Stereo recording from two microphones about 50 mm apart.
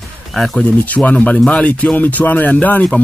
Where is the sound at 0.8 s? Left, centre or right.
Left.